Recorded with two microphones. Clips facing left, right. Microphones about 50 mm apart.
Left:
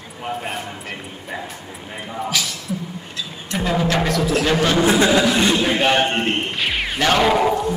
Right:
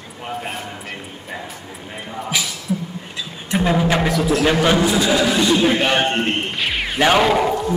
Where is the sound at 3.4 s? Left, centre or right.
Centre.